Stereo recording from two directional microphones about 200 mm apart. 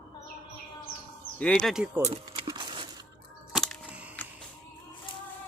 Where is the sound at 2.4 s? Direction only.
20° right (ahead or behind).